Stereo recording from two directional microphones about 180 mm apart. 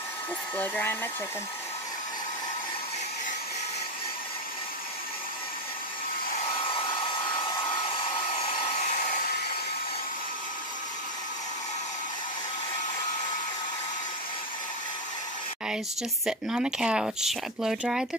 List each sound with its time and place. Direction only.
0.6 s speech: 10° left (ahead or behind)
6.5 s hair dryer: 30° left (ahead or behind)
15.7 s speech: 5° right (ahead or behind)